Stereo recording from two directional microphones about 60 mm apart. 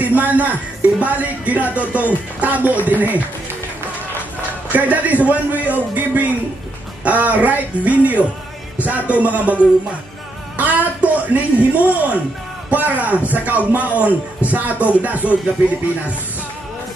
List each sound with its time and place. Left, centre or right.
0.0 s speech: right
4.7 s speech: right